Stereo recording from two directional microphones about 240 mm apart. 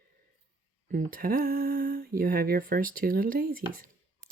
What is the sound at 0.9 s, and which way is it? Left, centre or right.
Speech, right.